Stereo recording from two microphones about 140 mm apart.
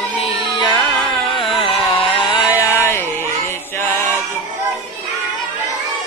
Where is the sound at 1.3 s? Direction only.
40° left (ahead or behind).